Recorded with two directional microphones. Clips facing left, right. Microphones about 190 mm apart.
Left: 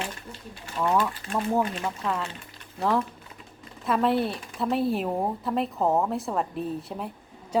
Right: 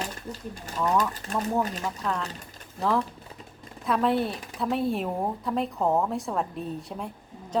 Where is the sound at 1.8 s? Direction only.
Centre (ahead or behind).